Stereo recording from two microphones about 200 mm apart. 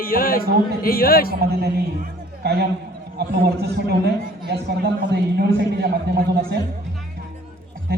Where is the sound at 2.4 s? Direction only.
55° right (ahead or behind).